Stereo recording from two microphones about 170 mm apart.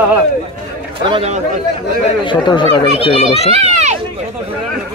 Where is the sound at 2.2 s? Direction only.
25° left (ahead or behind).